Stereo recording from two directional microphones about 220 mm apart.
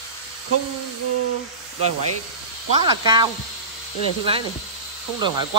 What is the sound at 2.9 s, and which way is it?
Speech, 20° right (ahead or behind).